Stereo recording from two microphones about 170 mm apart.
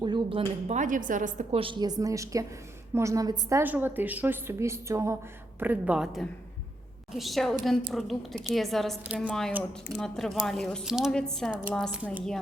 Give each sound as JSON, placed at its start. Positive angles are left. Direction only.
{"t": 0.0, "sound": "speech", "side_deg": -30}
{"t": 0.8, "sound": "a woman's voice", "side_deg": -50}
{"t": 1.5, "sound": "a woman's voice", "side_deg": -30}